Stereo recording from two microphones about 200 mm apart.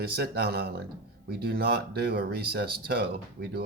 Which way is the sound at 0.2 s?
50° right (ahead or behind).